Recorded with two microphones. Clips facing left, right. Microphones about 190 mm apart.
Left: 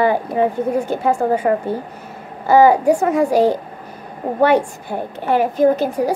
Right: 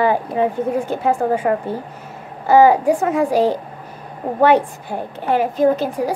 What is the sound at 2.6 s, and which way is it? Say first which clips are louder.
Speech: left 1 dB; 40° left (ahead or behind).